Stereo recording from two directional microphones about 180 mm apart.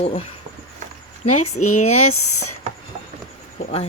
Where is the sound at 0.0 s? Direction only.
30° left (ahead or behind).